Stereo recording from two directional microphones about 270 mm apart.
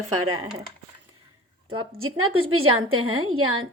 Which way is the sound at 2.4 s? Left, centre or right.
Right.